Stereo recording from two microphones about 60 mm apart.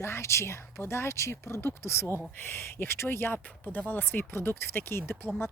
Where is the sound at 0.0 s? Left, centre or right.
Left.